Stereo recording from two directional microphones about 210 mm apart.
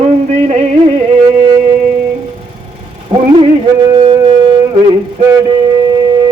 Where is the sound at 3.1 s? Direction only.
25° right (ahead or behind).